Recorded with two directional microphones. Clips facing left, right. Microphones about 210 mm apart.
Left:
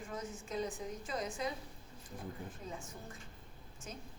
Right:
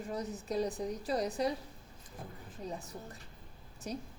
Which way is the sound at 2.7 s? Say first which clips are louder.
Right 4 dB; 35° right (ahead or behind).